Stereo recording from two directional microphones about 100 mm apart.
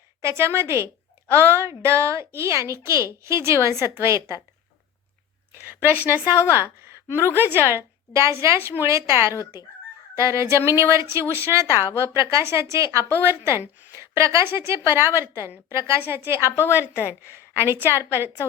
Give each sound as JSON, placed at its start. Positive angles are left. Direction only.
{"t": 0.2, "sound": "a woman's voice", "side_deg": -25}
{"t": 5.5, "sound": "a woman's voice", "side_deg": -20}
{"t": 6.3, "sound": "a woman's voice", "side_deg": 25}
{"t": 7.3, "sound": "a woman's voice", "side_deg": -20}